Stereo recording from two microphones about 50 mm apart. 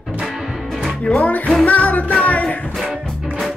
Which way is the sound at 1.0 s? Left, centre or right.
Left.